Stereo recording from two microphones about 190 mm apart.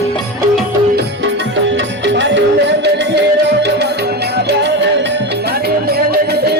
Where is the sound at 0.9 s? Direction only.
70° right (ahead or behind).